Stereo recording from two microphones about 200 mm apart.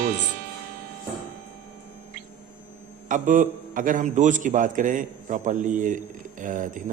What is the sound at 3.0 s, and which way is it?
A man's voice, 40° right (ahead or behind).